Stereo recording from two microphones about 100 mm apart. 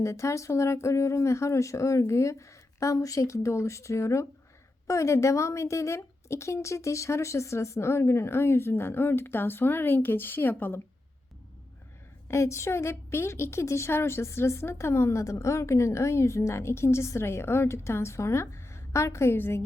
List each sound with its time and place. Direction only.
0.0 s a woman's voice: 30° left (ahead or behind)
12.3 s a woman's voice: 30° left (ahead or behind)